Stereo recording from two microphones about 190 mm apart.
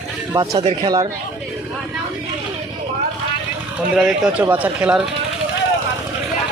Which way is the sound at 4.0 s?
5° right (ahead or behind).